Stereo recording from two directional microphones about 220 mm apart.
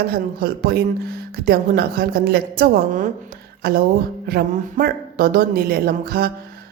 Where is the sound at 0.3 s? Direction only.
45° right (ahead or behind).